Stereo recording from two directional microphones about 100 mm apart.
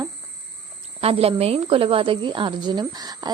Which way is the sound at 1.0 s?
80° right.